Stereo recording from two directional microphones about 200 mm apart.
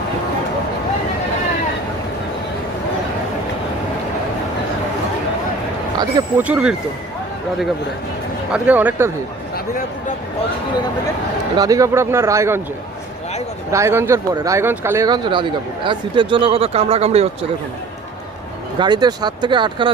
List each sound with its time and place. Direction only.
6.0 s speech: 20° right (ahead or behind)
6.4 s speech: 5° right (ahead or behind)
8.5 s speech: 10° right (ahead or behind)
11.5 s speech: 15° right (ahead or behind)
13.7 s speech: 15° right (ahead or behind); by 17.2 s 30° right (ahead or behind)
18.8 s speech: 20° right (ahead or behind)